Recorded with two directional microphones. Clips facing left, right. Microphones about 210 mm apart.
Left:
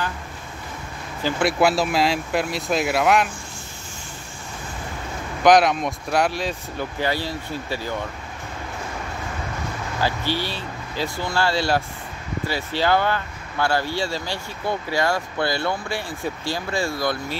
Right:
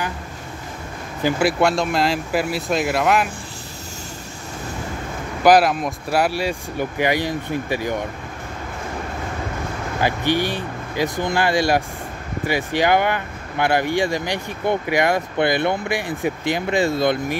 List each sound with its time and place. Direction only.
1.4 s speech: centre (ahead or behind)
5.4 s speech: 5° right (ahead or behind)
9.9 s speech: 15° right (ahead or behind)